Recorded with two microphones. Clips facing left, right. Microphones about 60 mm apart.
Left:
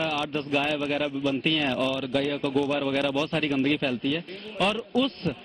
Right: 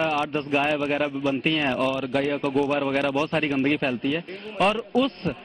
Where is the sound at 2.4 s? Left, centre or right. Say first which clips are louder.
Right 2 dB; centre.